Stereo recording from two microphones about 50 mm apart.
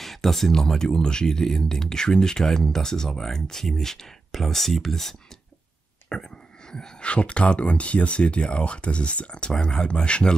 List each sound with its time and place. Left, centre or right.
0.0 s speech: centre
6.1 s speech: centre